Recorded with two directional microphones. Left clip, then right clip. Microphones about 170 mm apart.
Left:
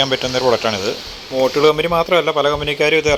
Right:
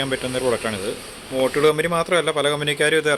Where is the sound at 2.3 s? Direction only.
15° right (ahead or behind).